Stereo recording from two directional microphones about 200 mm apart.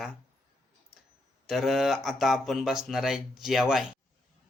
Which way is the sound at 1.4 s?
Centre (ahead or behind).